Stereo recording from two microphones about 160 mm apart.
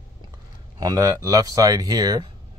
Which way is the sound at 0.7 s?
20° right (ahead or behind).